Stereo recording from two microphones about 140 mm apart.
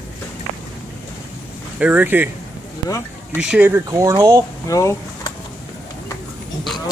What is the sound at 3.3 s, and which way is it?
Speech, 10° right (ahead or behind).